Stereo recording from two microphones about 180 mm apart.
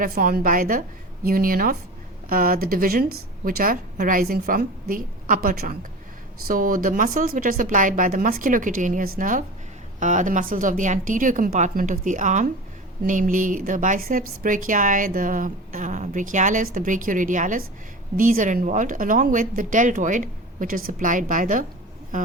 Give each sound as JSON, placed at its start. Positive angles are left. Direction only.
{"t": 0.0, "sound": "speech", "side_deg": -50}